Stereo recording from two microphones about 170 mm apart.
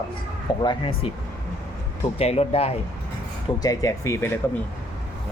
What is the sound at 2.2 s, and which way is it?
Speech, 35° left (ahead or behind).